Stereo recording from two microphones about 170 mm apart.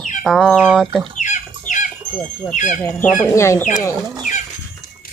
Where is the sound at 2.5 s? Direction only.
50° left (ahead or behind).